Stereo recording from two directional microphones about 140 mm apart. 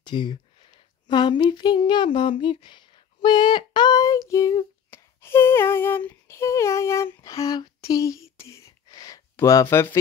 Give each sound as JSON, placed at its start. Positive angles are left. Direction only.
{"t": 0.0, "sound": "speech", "side_deg": 35}